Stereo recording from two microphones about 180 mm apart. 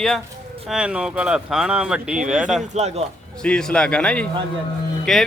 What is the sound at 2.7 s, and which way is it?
Speech, 35° right (ahead or behind).